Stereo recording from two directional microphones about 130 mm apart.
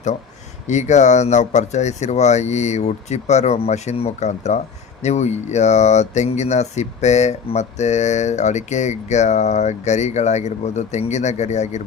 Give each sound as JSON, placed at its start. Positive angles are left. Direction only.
{"t": 0.7, "sound": "speech", "side_deg": 65}